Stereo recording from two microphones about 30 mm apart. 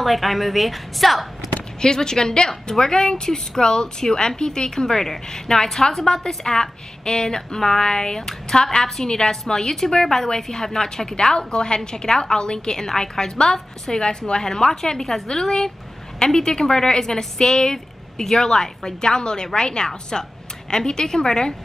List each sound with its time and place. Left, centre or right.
0.0 s a woman's voice: centre
1.8 s a woman's voice: left